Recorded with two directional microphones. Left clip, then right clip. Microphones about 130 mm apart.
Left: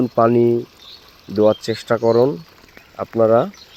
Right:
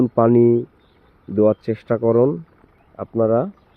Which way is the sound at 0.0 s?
35° right (ahead or behind).